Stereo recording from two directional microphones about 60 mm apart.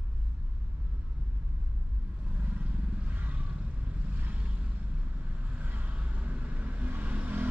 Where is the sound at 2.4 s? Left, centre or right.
Right.